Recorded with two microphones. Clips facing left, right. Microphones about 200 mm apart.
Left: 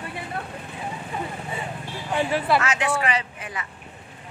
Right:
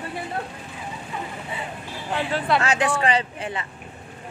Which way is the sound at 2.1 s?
15° left (ahead or behind).